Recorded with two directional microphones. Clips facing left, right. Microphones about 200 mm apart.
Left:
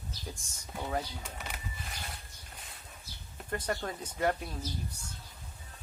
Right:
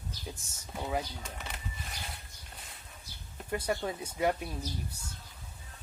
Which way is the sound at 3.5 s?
10° right (ahead or behind).